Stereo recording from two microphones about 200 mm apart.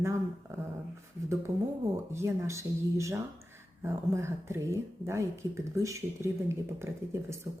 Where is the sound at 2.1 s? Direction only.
15° right (ahead or behind).